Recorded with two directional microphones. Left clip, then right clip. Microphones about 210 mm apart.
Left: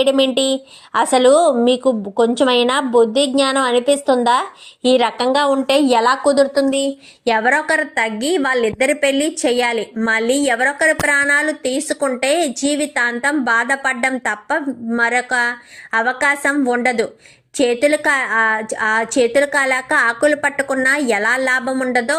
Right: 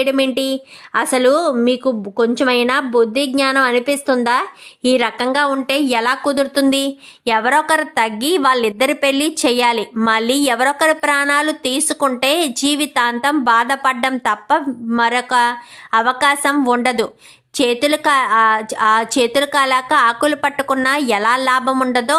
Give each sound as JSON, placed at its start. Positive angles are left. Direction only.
{"t": 0.0, "sound": "a woman's voice", "side_deg": -40}
{"t": 1.3, "sound": "a woman's voice", "side_deg": -15}
{"t": 2.4, "sound": "a woman's voice", "side_deg": -40}
{"t": 2.9, "sound": "a woman's voice", "side_deg": -15}
{"t": 3.4, "sound": "a woman's voice", "side_deg": -45}
{"t": 6.3, "sound": "a woman's voice", "side_deg": -40}
{"t": 7.3, "sound": "a woman's voice", "side_deg": -5}